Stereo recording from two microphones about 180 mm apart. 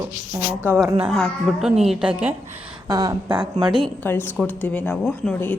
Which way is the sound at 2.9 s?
20° right (ahead or behind).